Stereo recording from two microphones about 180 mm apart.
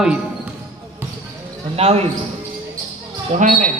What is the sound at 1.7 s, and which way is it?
Speech, 35° right (ahead or behind).